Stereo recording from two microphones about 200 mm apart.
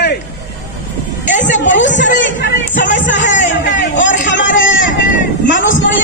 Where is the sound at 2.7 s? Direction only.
40° left (ahead or behind).